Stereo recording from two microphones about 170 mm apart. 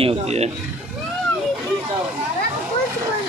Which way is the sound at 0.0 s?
35° right (ahead or behind).